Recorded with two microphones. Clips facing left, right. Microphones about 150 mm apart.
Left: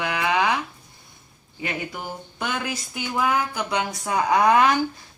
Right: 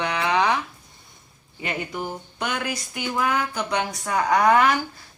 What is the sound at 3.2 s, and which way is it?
A woman's voice, 15° left (ahead or behind).